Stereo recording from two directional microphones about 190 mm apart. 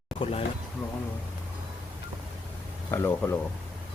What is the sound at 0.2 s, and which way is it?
Speech, 30° left (ahead or behind).